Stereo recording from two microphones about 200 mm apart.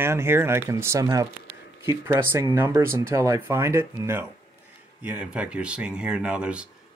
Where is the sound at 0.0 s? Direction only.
10° right (ahead or behind).